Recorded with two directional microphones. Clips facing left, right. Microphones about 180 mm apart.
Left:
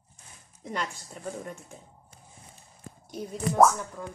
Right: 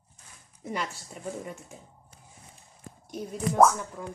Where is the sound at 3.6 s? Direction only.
Centre (ahead or behind).